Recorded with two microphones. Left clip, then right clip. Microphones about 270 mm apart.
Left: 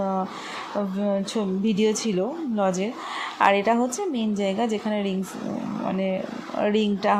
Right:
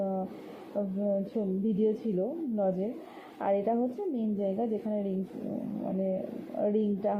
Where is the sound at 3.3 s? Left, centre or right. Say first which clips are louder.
Left 9 dB; left.